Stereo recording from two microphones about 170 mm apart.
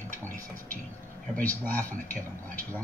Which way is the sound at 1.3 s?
10° left (ahead or behind).